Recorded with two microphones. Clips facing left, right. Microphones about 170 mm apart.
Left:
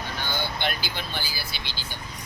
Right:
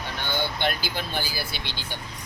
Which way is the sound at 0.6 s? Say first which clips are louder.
Right 3 dB; 45° right (ahead or behind).